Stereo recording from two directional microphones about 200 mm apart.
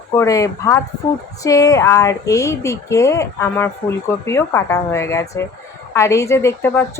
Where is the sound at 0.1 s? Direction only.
15° left (ahead or behind).